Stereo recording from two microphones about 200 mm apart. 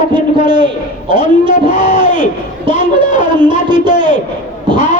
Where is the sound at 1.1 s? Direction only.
40° left (ahead or behind).